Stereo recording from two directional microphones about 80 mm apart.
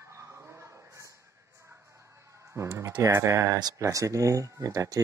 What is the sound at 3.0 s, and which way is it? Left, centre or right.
Speech, right.